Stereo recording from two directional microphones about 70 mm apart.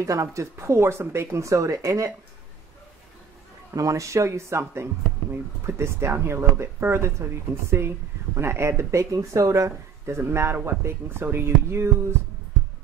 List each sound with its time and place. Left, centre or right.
0.0 s speech: right
3.7 s speech: right
8.4 s speech: right